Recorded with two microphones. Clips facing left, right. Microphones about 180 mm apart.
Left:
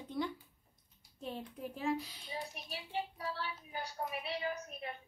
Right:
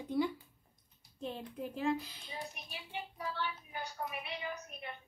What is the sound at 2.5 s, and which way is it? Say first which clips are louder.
A child's voice: left 4 dB; 35° left (ahead or behind).